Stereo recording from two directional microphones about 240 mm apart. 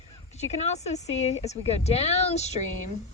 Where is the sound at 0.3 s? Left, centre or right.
Left.